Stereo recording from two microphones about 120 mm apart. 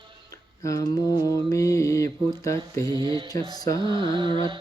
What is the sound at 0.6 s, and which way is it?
Mantra, 25° left (ahead or behind).